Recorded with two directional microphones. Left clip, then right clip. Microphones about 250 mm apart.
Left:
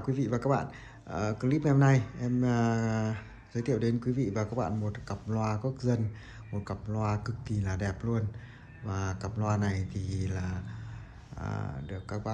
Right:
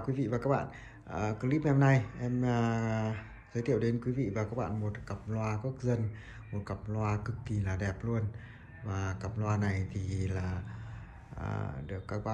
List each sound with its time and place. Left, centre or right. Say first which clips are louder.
0.0 s speech: left 2 dB; centre